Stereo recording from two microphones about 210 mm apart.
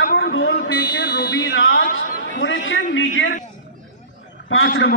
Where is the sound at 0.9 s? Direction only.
45° left (ahead or behind).